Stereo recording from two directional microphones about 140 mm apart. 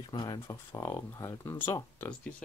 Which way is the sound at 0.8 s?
15° left (ahead or behind).